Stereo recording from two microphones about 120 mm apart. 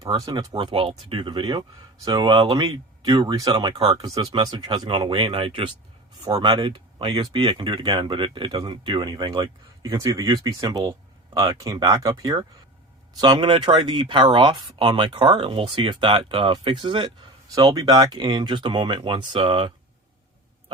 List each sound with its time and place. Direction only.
0.0 s speech: 35° right (ahead or behind); by 5.6 s 50° right (ahead or behind)
6.3 s speech: 40° right (ahead or behind)